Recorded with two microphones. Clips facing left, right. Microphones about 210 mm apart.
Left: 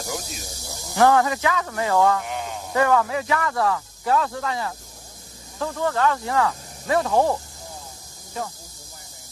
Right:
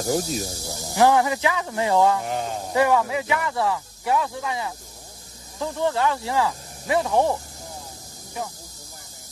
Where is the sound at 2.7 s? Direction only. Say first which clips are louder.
Even; 15° right (ahead or behind).